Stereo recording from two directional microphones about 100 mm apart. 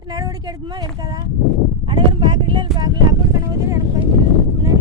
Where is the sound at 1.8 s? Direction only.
55° right (ahead or behind).